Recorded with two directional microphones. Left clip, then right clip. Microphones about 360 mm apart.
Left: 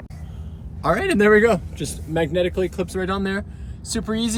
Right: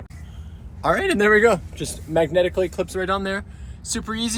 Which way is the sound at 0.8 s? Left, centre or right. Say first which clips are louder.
Even; centre.